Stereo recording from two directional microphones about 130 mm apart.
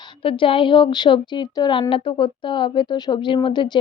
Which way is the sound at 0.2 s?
45° left (ahead or behind).